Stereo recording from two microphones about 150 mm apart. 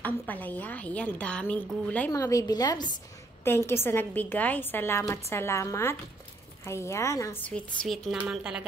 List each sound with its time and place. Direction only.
0.0 s a woman's voice: 10° left (ahead or behind)
2.1 s a woman's voice: 20° left (ahead or behind)
7.4 s a woman's voice: 5° left (ahead or behind)